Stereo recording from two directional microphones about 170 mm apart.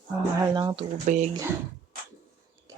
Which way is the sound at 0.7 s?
45° right (ahead or behind).